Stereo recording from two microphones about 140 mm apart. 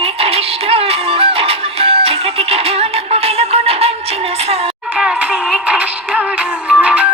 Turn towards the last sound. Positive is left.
turn(degrees=-10)  # may be behind; listen again after turning